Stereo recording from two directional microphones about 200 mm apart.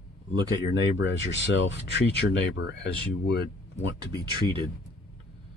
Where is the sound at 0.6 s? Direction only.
65° left (ahead or behind).